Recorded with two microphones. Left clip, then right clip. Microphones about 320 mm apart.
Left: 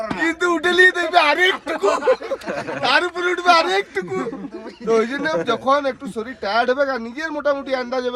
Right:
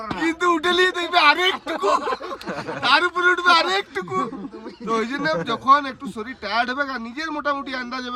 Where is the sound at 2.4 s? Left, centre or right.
Centre.